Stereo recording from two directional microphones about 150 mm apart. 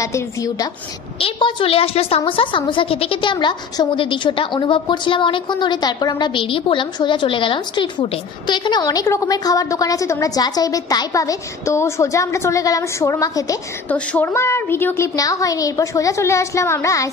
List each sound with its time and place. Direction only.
0.0 s a woman's voice: 20° left (ahead or behind)
1.2 s a woman's voice: 35° left (ahead or behind)
13.8 s a woman's voice: 10° left (ahead or behind)